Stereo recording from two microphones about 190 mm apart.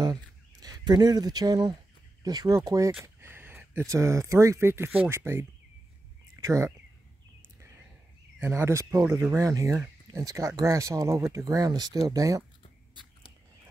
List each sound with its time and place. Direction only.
0.0 s speech: 20° right (ahead or behind)
8.4 s speech: 10° right (ahead or behind)